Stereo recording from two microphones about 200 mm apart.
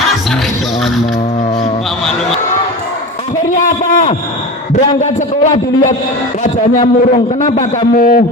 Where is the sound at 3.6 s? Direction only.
35° left (ahead or behind).